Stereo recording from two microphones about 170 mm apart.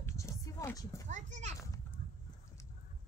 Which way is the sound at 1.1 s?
45° right (ahead or behind).